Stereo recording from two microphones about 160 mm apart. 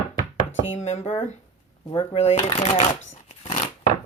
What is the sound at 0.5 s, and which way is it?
Speech, 45° left (ahead or behind).